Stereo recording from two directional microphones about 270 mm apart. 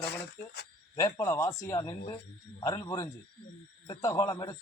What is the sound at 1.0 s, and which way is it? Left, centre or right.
A man's voice, centre.